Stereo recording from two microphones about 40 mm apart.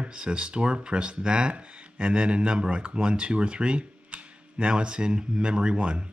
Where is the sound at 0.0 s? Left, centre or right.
Right.